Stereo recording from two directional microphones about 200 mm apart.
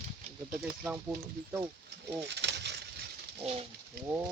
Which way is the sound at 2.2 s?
60° right (ahead or behind).